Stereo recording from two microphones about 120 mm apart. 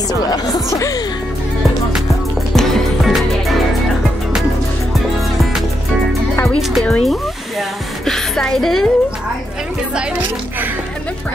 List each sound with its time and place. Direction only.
0.3 s speech: 30° left (ahead or behind)
2.5 s music: centre (ahead or behind)
6.5 s a woman's voice: 5° left (ahead or behind)
8.0 s a woman's voice: 5° left (ahead or behind)